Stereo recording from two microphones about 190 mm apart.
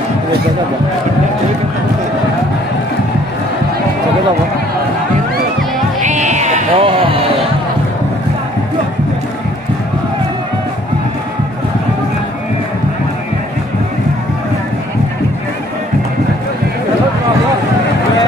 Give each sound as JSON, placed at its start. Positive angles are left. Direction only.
{"t": 5.9, "sound": "music", "side_deg": -40}